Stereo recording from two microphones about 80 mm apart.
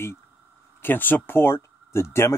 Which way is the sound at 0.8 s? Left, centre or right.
Left.